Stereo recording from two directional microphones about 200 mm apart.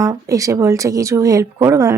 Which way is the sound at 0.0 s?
15° right (ahead or behind).